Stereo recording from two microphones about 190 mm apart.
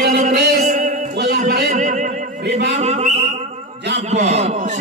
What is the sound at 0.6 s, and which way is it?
Music, 40° right (ahead or behind).